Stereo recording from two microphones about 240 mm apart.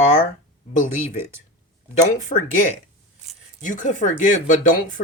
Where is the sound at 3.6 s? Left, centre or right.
Left.